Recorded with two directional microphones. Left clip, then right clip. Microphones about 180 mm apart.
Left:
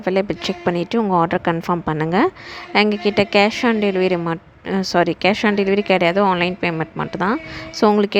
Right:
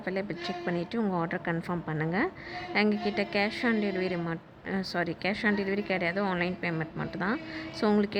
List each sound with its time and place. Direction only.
0.0 s a woman's voice: 50° left (ahead or behind)